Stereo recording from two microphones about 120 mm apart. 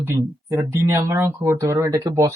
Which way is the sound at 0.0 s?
20° right (ahead or behind).